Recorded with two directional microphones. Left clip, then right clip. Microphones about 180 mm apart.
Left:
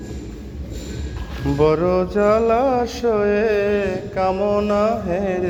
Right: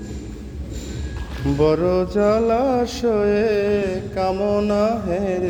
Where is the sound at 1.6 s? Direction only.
30° right (ahead or behind).